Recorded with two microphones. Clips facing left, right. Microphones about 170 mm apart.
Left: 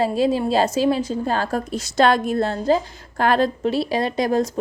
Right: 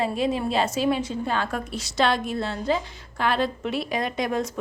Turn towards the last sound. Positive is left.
turn(degrees=35)  # may be behind; listen again after turning